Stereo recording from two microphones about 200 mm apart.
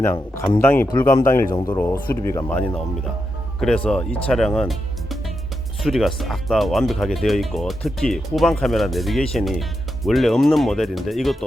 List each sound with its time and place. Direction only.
0.0 s speech: 10° left (ahead or behind)